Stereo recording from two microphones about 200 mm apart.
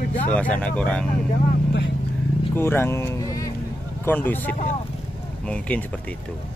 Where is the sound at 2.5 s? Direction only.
10° left (ahead or behind).